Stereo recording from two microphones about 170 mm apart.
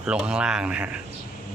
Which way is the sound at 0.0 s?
5° right (ahead or behind).